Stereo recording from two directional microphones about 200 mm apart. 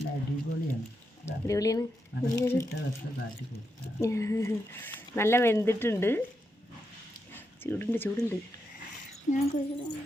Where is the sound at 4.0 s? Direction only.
15° left (ahead or behind).